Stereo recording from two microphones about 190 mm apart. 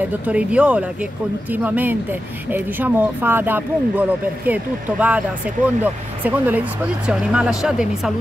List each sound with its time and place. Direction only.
0.3 s speech: 5° right (ahead or behind)
6.2 s speech: 10° right (ahead or behind)